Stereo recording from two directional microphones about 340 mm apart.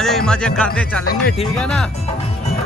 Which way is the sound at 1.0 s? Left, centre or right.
Left.